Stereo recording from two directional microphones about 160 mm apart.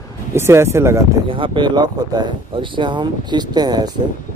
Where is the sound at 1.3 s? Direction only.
30° right (ahead or behind).